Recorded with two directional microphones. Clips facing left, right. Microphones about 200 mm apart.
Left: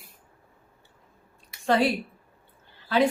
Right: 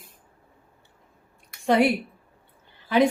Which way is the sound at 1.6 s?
15° right (ahead or behind).